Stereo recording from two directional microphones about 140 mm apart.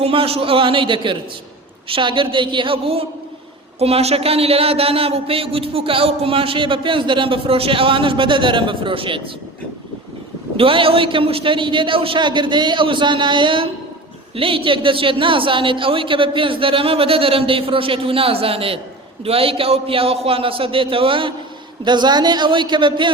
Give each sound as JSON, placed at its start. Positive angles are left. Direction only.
{"t": 0.0, "sound": "speech", "side_deg": -40}
{"t": 10.6, "sound": "speech", "side_deg": -40}